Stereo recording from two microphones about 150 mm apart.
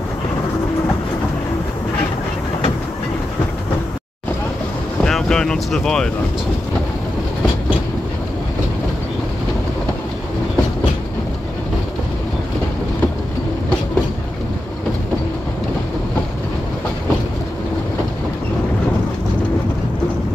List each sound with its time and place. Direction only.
5.0 s boat: 5° left (ahead or behind)